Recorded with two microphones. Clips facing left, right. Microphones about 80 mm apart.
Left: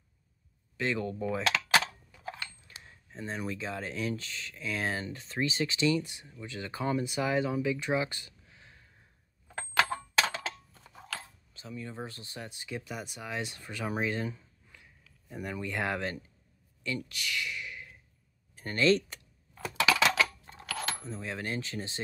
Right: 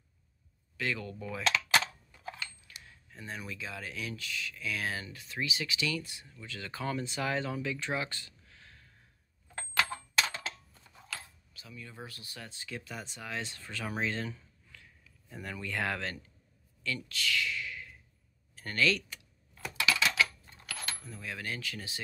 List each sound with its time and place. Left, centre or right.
0.7 s speech: left
2.8 s speech: left
9.5 s a sound: left
11.1 s speech: left
19.8 s a sound: left
21.0 s speech: left